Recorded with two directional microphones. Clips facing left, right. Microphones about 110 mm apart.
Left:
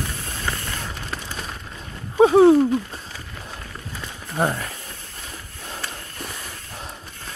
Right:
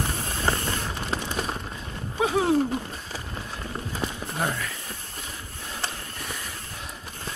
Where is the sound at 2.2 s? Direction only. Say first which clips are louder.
Left 10 dB; 35° left (ahead or behind).